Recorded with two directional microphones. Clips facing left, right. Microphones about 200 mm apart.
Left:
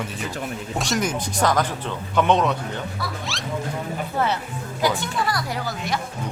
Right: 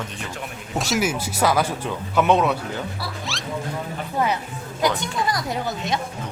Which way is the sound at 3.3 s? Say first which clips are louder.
Even; centre (ahead or behind).